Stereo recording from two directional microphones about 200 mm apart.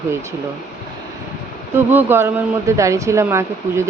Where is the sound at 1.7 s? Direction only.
10° right (ahead or behind).